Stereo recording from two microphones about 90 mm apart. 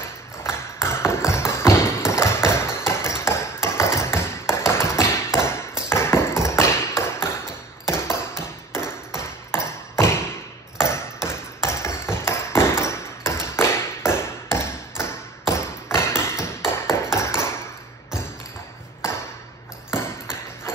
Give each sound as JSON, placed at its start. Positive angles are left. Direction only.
{"t": 0.4, "sound": "tap", "side_deg": 30}
{"t": 7.9, "sound": "ping", "side_deg": 30}